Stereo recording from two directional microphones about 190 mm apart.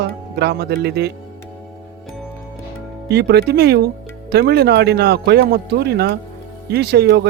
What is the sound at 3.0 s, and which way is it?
Speech, 60° right (ahead or behind).